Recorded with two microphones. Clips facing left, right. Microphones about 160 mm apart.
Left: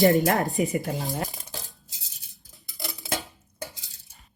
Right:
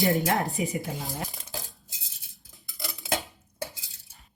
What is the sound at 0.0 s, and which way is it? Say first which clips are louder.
Speech: left 5 dB; 45° left (ahead or behind).